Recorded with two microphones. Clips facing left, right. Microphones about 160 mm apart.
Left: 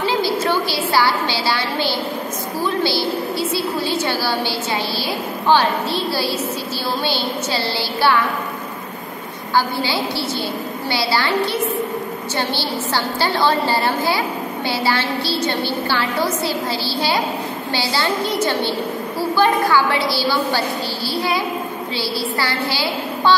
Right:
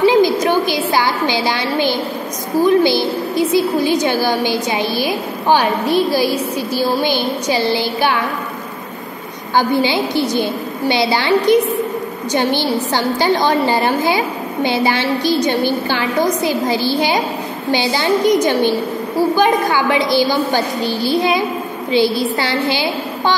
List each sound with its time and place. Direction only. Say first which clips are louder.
0.0 s a sound: right 7 dB; 15° right (ahead or behind)
2.6 s a woman's voice: right 7 dB; 15° right (ahead or behind)
9.6 s a woman's voice: right 5 dB; 20° right (ahead or behind)